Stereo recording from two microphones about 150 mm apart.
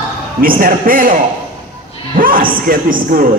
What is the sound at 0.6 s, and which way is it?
Speech, 70° right (ahead or behind).